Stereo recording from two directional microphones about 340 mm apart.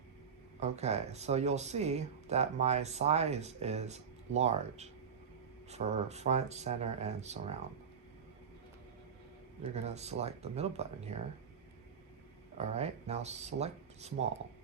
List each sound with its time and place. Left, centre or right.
0.6 s speech: centre
9.7 s speech: centre
12.5 s speech: centre